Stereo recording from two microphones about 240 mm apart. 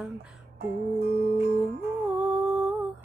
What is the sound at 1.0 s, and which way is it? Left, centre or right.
Music, right.